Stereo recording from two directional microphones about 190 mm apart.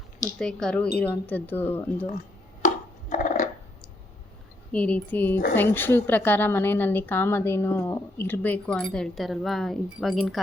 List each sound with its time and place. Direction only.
0.3 s a woman's voice: 5° left (ahead or behind)
2.6 s a sound: 40° left (ahead or behind)
4.7 s a woman's voice: 5° left (ahead or behind)